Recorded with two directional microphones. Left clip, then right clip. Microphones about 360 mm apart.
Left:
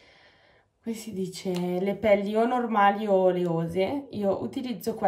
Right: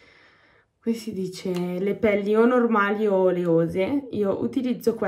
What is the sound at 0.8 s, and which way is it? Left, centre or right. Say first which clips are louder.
Speech: right 5 dB; centre.